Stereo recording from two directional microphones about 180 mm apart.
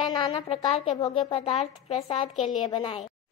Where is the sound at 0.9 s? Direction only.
25° left (ahead or behind).